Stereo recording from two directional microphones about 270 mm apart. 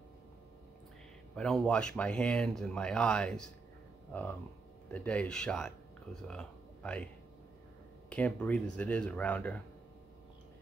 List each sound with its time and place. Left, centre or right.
1.3 s speech: centre
4.9 s speech: centre
8.1 s speech: centre